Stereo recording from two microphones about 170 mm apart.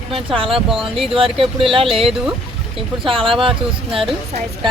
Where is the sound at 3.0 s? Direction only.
30° right (ahead or behind).